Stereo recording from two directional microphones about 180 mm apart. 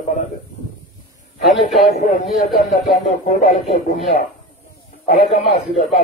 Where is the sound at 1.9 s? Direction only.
40° left (ahead or behind).